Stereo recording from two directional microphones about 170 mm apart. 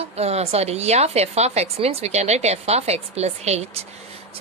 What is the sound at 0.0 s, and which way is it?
Speech, 35° right (ahead or behind).